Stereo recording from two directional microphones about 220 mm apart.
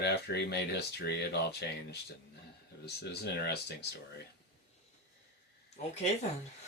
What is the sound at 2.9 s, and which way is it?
Speech, 50° left (ahead or behind).